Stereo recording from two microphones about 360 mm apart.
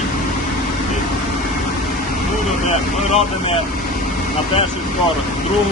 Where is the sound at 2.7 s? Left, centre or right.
Centre.